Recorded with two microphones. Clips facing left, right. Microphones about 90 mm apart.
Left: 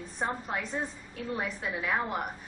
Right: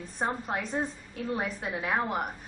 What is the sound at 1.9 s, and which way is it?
Speech, 15° right (ahead or behind).